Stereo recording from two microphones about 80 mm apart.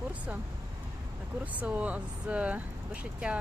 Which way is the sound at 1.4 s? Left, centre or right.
Centre.